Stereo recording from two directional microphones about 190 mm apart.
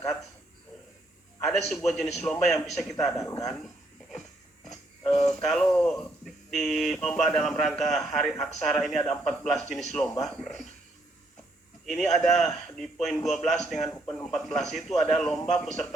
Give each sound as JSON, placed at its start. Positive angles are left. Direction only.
{"t": 1.5, "sound": "a man's voice", "side_deg": 0}
{"t": 3.1, "sound": "speech", "side_deg": 15}
{"t": 5.3, "sound": "a man's voice", "side_deg": 0}
{"t": 11.9, "sound": "a man's voice", "side_deg": 0}